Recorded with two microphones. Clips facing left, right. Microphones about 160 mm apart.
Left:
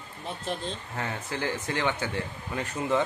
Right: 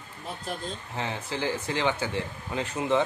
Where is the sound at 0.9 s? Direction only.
25° right (ahead or behind).